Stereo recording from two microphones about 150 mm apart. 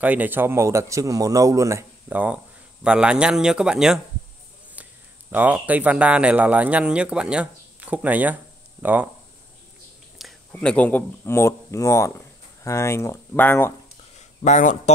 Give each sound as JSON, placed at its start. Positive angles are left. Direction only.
{"t": 0.0, "sound": "a man's voice", "side_deg": -10}
{"t": 4.8, "sound": "a sound", "side_deg": -10}
{"t": 5.3, "sound": "a man's voice", "side_deg": -10}
{"t": 10.1, "sound": "speech", "side_deg": 5}
{"t": 14.4, "sound": "speech", "side_deg": 55}